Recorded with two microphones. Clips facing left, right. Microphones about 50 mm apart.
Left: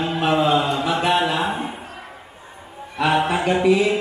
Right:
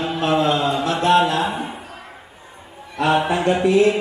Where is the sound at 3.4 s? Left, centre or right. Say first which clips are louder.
Right 1 dB; centre.